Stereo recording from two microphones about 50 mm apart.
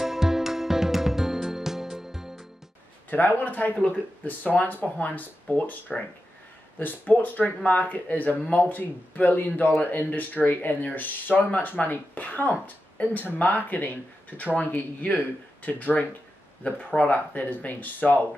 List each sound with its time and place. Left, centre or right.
0.0 s music: centre
3.1 s speech: left